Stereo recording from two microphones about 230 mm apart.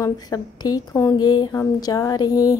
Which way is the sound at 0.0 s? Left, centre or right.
Centre.